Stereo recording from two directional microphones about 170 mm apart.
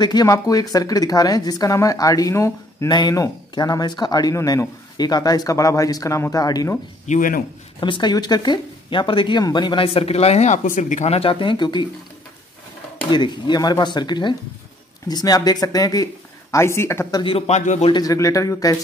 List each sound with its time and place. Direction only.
0.0 s speech: 25° left (ahead or behind)
7.1 s speech: 50° left (ahead or behind)
7.8 s speech: 25° left (ahead or behind)
13.1 s speech: 25° left (ahead or behind)
17.2 s a man's voice: 35° left (ahead or behind)
17.9 s speech: 20° left (ahead or behind)